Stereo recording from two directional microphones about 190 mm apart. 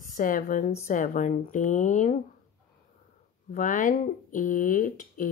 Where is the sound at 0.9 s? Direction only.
45° left (ahead or behind).